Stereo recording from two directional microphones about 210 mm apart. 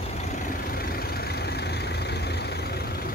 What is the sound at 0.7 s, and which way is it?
Vehicle, 45° left (ahead or behind).